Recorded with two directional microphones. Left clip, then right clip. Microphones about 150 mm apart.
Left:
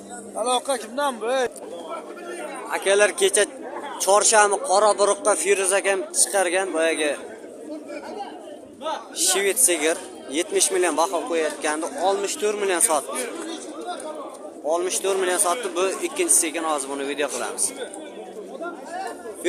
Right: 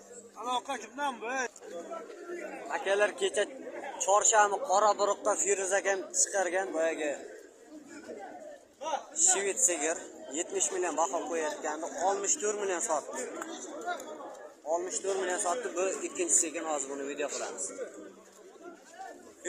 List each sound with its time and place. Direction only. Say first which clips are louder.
0.4 s a man's voice: left 10 dB; 30° left (ahead or behind)
2.6 s speech: left 10 dB; 45° left (ahead or behind)
5.2 s a man's voice: left 9 dB; 70° left (ahead or behind)
5.5 s a man's voice: left 8 dB; 30° left (ahead or behind); by 7.2 s 45° left (ahead or behind)
9.3 s speech: left 11 dB; 55° left (ahead or behind)
11.3 s speech: left 10 dB; 45° left (ahead or behind)
14.7 s a man's voice: left 9 dB; 35° left (ahead or behind)